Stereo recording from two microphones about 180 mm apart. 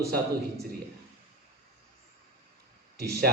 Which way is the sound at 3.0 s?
60° right (ahead or behind).